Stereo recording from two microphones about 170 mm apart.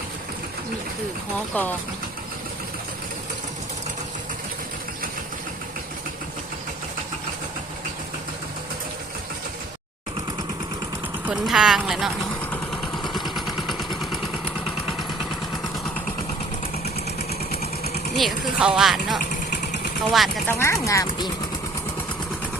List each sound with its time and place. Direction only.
1.5 s speech: 10° left (ahead or behind)
11.3 s speech: 5° right (ahead or behind)
13.0 s vehicle: centre (ahead or behind)
18.2 s speech: centre (ahead or behind)
19.2 s vehicle: 50° left (ahead or behind)
20.1 s speech: centre (ahead or behind)
20.5 s speech: 15° left (ahead or behind)